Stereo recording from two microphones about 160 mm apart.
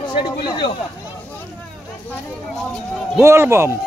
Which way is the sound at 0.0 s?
30° left (ahead or behind).